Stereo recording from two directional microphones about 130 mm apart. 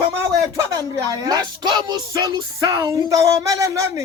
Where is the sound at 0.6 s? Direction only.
25° right (ahead or behind).